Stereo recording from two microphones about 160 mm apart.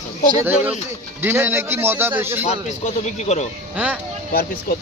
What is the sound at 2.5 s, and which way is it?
A man's voice, 45° left (ahead or behind).